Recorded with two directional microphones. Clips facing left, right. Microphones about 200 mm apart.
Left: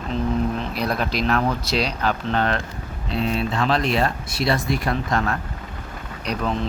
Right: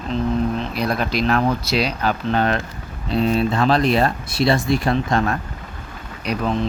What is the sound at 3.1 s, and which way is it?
Speech, 40° right (ahead or behind).